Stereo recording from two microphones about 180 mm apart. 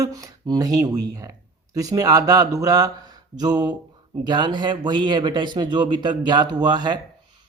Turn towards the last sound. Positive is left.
turn(degrees=-25)  # may be behind; listen again after turning